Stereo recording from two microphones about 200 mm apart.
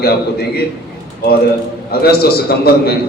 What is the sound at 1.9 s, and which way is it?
A man's voice, 50° left (ahead or behind).